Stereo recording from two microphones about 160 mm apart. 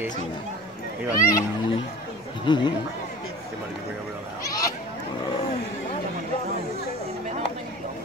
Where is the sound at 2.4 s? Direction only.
30° left (ahead or behind).